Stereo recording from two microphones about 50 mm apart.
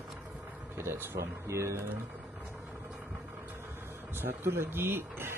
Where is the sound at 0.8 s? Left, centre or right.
Right.